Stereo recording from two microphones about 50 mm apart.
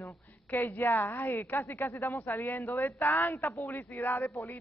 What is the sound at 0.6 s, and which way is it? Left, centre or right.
Speech, left.